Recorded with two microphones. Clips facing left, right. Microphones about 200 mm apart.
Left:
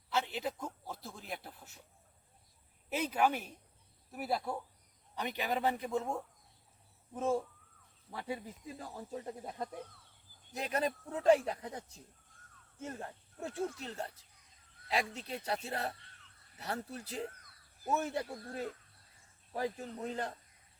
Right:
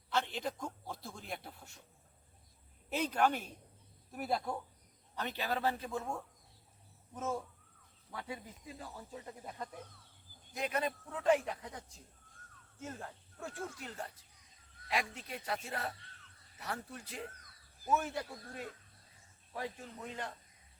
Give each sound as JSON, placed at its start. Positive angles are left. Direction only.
{"t": 0.1, "sound": "a sound", "side_deg": 5}
{"t": 2.9, "sound": "a man's voice", "side_deg": 5}
{"t": 12.8, "sound": "a man's voice", "side_deg": 20}
{"t": 19.5, "sound": "a man's voice", "side_deg": 35}